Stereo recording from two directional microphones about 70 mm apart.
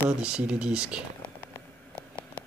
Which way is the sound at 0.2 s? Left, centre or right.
Centre.